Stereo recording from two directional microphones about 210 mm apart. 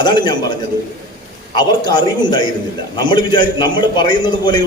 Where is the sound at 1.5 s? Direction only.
20° left (ahead or behind).